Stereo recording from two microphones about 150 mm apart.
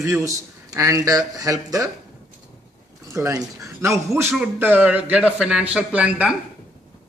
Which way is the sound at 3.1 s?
20° right (ahead or behind).